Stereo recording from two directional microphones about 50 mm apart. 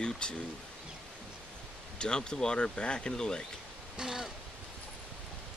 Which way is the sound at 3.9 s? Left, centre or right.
Centre.